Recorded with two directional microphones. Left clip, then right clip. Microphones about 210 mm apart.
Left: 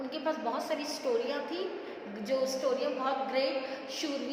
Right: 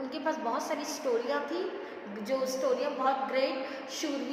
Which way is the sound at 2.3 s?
10° right (ahead or behind).